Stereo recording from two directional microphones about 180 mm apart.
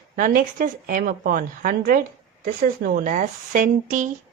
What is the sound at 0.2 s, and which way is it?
Speech, 50° right (ahead or behind).